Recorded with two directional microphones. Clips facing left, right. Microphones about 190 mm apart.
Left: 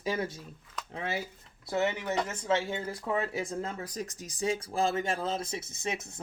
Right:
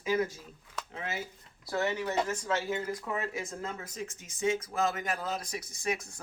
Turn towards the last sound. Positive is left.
turn(degrees=25)  # may be behind; listen again after turning